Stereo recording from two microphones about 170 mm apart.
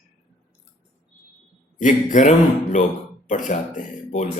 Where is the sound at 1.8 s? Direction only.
50° left (ahead or behind).